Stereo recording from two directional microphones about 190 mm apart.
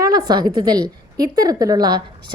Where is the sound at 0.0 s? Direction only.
20° right (ahead or behind).